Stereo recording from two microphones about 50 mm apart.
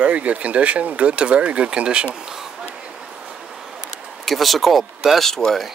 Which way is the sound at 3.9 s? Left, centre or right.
Centre.